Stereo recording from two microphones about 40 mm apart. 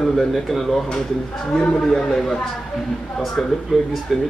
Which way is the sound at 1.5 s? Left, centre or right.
Centre.